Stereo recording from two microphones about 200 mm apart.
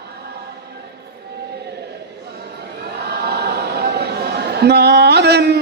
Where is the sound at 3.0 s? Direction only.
55° right (ahead or behind).